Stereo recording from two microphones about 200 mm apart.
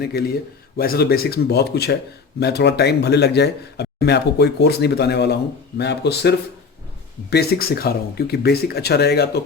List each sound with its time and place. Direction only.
0.0 s a man's voice: 50° left (ahead or behind)